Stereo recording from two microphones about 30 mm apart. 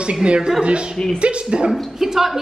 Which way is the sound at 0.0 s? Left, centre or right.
Right.